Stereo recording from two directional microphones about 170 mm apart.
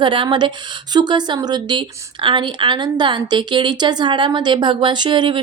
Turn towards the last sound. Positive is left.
turn(degrees=-25)  # may be behind; listen again after turning